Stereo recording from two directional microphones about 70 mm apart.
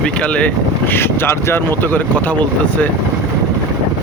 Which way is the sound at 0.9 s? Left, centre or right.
Left.